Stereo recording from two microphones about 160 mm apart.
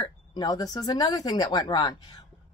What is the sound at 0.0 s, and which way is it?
Speech, 25° left (ahead or behind).